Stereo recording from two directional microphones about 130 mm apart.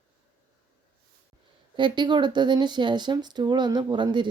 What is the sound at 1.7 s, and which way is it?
Speech, 35° right (ahead or behind).